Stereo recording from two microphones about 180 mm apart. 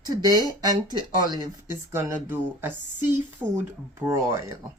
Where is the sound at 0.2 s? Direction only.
20° right (ahead or behind).